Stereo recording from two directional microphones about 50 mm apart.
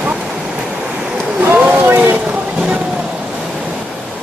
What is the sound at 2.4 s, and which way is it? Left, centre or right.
Vehicle, right.